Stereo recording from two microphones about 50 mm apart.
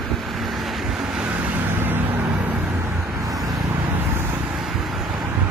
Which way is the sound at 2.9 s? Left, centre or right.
Right.